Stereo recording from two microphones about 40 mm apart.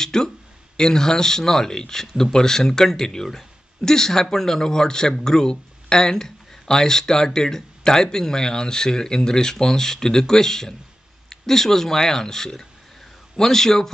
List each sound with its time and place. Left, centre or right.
0.0 s speech: centre